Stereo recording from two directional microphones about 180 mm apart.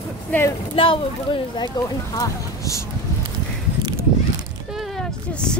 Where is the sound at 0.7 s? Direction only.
30° left (ahead or behind).